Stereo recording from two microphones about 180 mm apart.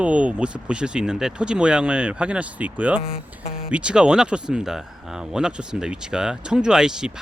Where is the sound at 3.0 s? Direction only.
55° left (ahead or behind).